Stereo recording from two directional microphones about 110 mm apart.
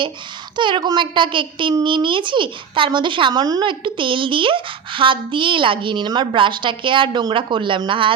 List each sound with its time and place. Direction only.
0.5 s a child's voice: 45° right (ahead or behind)